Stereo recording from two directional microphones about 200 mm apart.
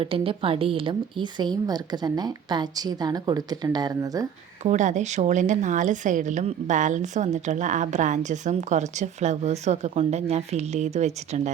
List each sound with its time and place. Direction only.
0.0 s a woman's voice: 25° right (ahead or behind)
4.6 s a woman's voice: 35° right (ahead or behind)